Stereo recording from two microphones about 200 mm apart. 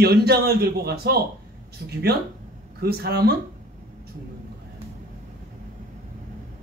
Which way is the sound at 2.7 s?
50° right (ahead or behind).